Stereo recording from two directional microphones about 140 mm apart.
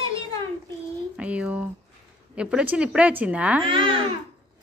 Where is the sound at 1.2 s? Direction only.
10° right (ahead or behind).